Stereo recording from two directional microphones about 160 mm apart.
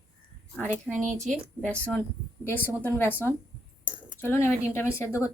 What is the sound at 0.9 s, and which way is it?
Speech, centre (ahead or behind).